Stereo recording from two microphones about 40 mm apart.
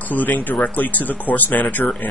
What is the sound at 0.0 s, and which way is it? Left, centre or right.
Speech, left.